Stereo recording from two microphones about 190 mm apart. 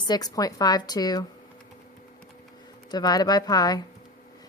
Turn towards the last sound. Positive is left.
turn(degrees=20)  # may be behind; listen again after turning